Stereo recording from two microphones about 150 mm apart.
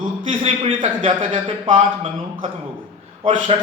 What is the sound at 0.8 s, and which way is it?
Speech, 50° right (ahead or behind).